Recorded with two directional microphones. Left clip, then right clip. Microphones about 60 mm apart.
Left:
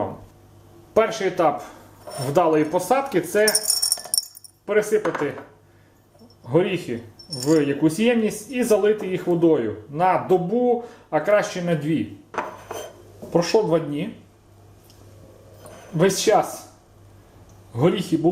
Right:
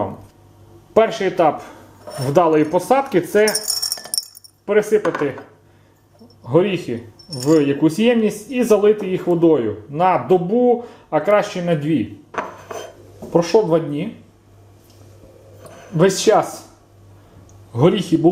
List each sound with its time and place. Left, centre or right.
1.2 s speech: centre
2.0 s a sound: centre
2.3 s speech: centre
3.4 s music: centre
4.6 s speech: centre
6.9 s speech: centre
11.3 s speech: right
11.6 s speech: centre
12.3 s a sound: centre
13.3 s speech: centre
15.7 s music: centre
16.3 s speech: centre
17.7 s speech: centre